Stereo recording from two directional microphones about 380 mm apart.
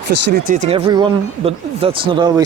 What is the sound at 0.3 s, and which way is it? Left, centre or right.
Speech, right.